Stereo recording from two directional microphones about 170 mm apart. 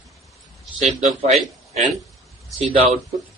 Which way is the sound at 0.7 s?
45° right (ahead or behind).